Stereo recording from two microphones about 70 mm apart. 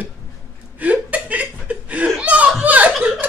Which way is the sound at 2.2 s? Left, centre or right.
Centre.